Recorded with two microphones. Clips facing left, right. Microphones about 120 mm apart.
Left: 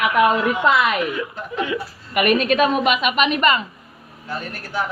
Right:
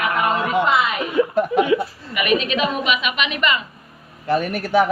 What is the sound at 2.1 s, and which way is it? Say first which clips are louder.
A woman's voice: left 3 dB; 45° left (ahead or behind).